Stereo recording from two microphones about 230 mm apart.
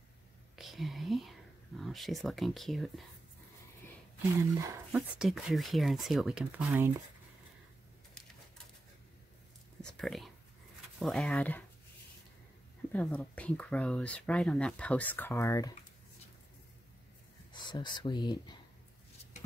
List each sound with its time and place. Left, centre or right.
0.6 s speech: centre
4.6 s speech: centre
9.8 s a sound: centre
11.0 s speech: centre
12.9 s speech: centre
17.5 s speech: centre